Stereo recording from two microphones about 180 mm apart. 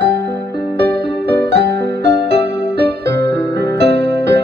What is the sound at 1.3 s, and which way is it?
Music, 70° right (ahead or behind).